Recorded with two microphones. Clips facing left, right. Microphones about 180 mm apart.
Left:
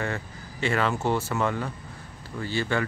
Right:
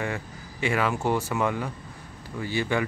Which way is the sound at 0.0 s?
10° right (ahead or behind).